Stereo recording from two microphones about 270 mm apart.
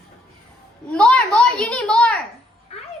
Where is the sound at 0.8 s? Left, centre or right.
Centre.